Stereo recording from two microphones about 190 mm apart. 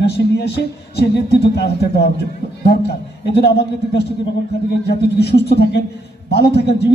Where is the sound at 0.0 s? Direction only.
60° left (ahead or behind).